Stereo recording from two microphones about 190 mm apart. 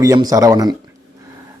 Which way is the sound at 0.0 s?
20° right (ahead or behind).